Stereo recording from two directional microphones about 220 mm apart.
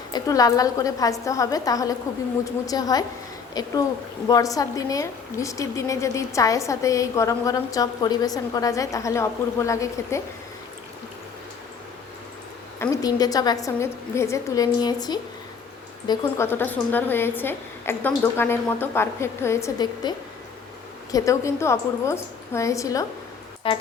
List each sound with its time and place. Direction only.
0.1 s a woman's voice: 15° left (ahead or behind)
12.8 s a woman's voice: 15° left (ahead or behind)
23.6 s music: 25° left (ahead or behind)